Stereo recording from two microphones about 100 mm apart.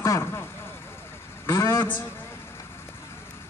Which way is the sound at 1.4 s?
30° left (ahead or behind).